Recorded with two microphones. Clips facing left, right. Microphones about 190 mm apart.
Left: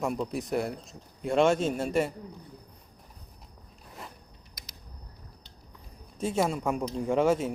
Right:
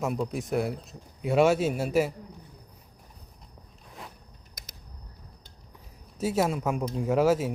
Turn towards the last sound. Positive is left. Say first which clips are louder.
# right 1 dB
turn(degrees=-5)  # may be behind; listen again after turning